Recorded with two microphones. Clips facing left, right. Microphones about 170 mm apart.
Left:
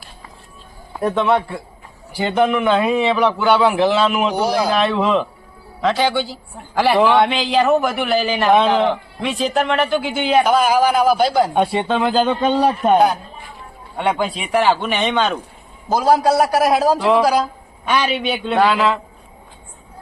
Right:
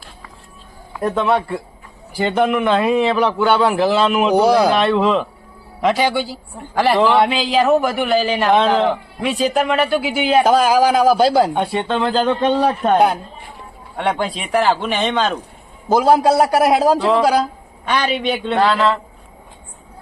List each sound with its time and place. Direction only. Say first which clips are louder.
1.0 s a man's voice: even; centre (ahead or behind)
4.4 s speech: right 5 dB; 60° right (ahead or behind)
4.7 s a man's voice: right 2 dB; centre (ahead or behind)
5.8 s a man's voice: right 1 dB; 15° right (ahead or behind)
10.4 s a man's voice: right 3 dB; 35° right (ahead or behind)
11.5 s a man's voice: left 2 dB; 15° left (ahead or behind); by 15.4 s centre (ahead or behind)
16.0 s a man's voice: right 1 dB; 25° right (ahead or behind)
17.8 s a man's voice: even; 5° left (ahead or behind)